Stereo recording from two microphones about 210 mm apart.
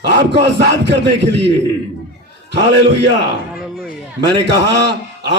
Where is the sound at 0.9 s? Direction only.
55° right (ahead or behind).